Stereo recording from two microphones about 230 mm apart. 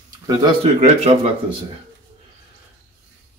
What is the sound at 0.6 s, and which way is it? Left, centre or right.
Speech, right.